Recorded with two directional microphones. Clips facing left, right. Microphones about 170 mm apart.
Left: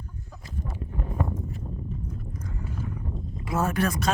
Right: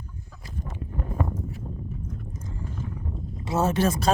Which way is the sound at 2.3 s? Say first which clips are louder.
Left 1 dB; 25° right (ahead or behind).